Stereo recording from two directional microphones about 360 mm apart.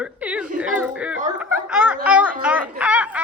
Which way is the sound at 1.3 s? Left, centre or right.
Centre.